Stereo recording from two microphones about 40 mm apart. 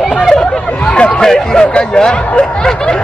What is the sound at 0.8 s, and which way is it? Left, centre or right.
Hubbub, left.